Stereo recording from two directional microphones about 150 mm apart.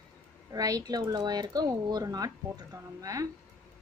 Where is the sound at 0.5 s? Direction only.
25° right (ahead or behind).